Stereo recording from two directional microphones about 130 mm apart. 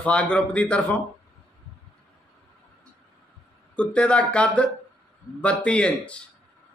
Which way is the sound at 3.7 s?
10° left (ahead or behind).